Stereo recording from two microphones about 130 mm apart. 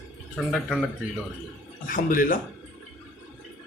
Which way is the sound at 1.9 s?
90° left.